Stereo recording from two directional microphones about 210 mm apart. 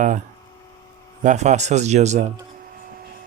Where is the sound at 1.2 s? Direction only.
35° right (ahead or behind).